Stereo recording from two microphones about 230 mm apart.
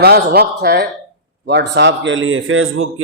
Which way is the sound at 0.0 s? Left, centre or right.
Right.